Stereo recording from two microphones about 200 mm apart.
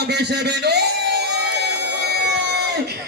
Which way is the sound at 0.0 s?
55° right (ahead or behind).